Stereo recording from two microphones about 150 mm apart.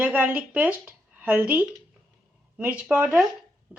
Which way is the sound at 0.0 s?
10° right (ahead or behind).